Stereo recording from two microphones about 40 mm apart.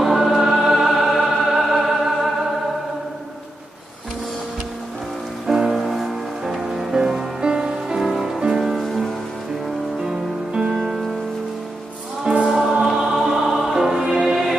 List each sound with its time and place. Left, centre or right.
0.0 s music: centre
5.5 s music: centre
8.8 s rain on surface: centre
10.0 s music: centre
10.7 s music: centre
12.4 s music: centre